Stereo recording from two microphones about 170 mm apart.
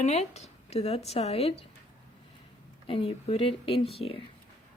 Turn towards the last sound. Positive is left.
turn(degrees=30)  # may be behind; listen again after turning